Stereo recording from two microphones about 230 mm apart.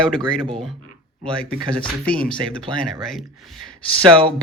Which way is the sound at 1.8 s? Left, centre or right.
Centre.